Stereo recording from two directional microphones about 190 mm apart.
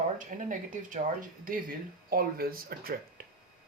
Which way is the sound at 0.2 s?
45° right (ahead or behind).